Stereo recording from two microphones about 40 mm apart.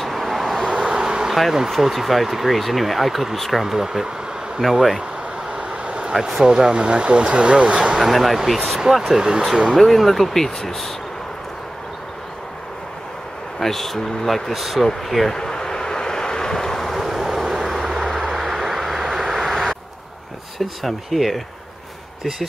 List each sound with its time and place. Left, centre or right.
0.0 s vehicle: centre
0.7 s vehicle: centre
1.7 s speech: centre
5.7 s vehicle: right
6.1 s speech: centre; by 7.9 s right
7.9 s speech: centre
9.8 s speech: centre
13.6 s speech: centre
15.3 s vehicle: centre
17.0 s vehicle: centre
20.5 s speech: centre